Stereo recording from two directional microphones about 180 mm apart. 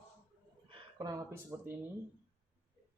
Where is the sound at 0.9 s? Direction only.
20° right (ahead or behind).